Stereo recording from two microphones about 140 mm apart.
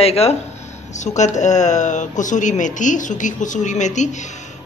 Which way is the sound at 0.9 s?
55° left (ahead or behind).